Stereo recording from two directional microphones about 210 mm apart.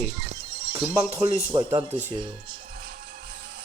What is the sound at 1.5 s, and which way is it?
Speech, 20° right (ahead or behind).